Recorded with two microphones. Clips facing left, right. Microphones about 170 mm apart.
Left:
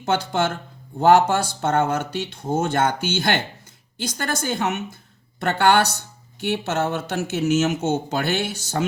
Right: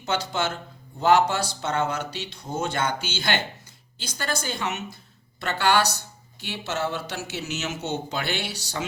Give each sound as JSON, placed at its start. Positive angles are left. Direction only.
{"t": 0.0, "sound": "speech", "side_deg": 50}